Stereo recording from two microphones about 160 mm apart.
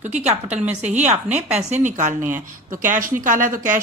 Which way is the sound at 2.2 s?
10° right (ahead or behind).